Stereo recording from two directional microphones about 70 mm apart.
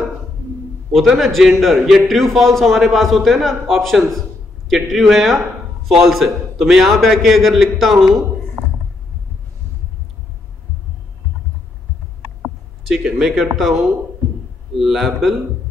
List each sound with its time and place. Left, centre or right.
0.9 s a man's voice: centre
8.6 s a sound: right
12.8 s a man's voice: centre